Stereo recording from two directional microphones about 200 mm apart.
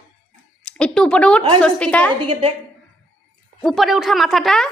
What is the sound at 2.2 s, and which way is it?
Speech, 25° right (ahead or behind).